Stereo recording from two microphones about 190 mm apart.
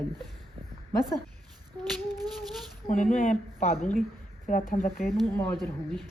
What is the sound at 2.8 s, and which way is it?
A woman's voice, 40° left (ahead or behind).